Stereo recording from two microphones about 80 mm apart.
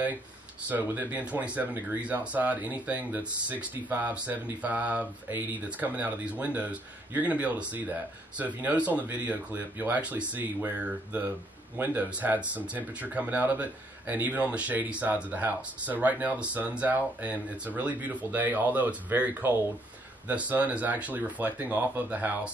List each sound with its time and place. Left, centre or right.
0.7 s speech: right